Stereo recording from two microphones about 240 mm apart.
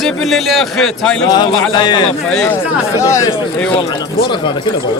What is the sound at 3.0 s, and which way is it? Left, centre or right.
Speech, centre.